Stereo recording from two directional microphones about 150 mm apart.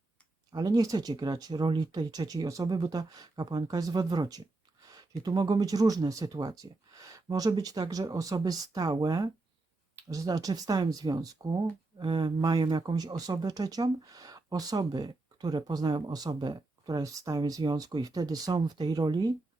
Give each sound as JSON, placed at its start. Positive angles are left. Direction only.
{"t": 0.5, "sound": "speech", "side_deg": -25}